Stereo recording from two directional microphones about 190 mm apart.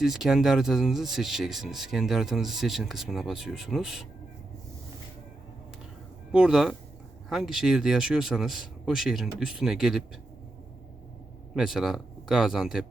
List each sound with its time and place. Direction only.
0.0 s speech: centre (ahead or behind)
6.3 s speech: 5° right (ahead or behind)
11.5 s speech: centre (ahead or behind)